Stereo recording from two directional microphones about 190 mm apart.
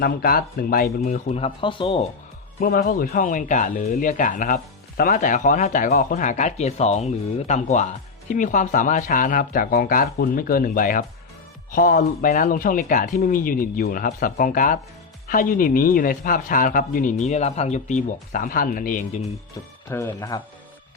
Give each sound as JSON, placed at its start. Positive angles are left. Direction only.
{"t": 0.0, "sound": "speech", "side_deg": 50}
{"t": 2.6, "sound": "speech", "side_deg": 50}
{"t": 20.1, "sound": "speech", "side_deg": 20}